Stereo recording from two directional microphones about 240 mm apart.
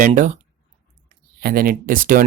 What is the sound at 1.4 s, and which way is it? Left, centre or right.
Speech, right.